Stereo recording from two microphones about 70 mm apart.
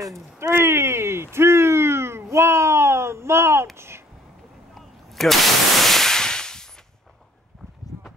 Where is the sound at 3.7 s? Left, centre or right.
Right.